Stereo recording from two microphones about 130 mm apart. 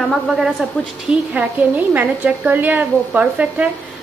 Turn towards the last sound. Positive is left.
turn(degrees=-10)  # may be behind; listen again after turning